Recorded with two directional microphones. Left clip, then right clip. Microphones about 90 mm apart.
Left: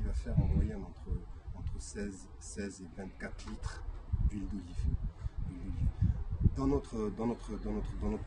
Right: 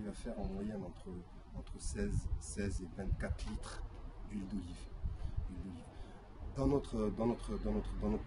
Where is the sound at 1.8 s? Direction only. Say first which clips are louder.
Even; 30° right (ahead or behind).